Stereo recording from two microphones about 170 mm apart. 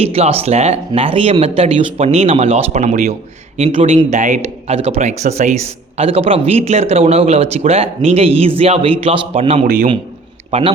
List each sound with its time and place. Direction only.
0.0 s speech: 35° right (ahead or behind)